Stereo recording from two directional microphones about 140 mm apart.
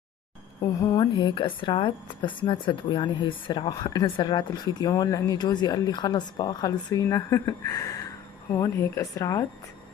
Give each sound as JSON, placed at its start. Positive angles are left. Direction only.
{"t": 0.7, "sound": "speech", "side_deg": 25}